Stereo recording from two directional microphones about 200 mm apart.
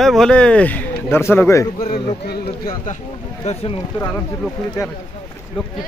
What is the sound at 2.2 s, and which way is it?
Speech, 50° left (ahead or behind).